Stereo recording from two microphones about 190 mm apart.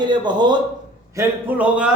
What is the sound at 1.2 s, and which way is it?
Speech, 10° right (ahead or behind).